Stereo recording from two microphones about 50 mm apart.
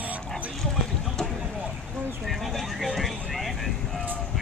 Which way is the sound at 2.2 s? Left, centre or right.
Centre.